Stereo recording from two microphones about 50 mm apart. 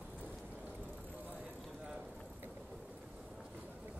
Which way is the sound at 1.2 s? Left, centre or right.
Right.